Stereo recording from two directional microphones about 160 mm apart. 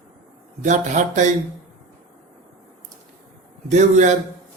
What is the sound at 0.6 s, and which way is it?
Speech, 50° right (ahead or behind).